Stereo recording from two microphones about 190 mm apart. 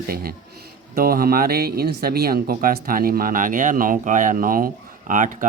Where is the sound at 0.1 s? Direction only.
50° right (ahead or behind).